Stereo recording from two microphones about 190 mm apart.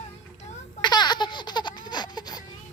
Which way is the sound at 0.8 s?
25° left (ahead or behind).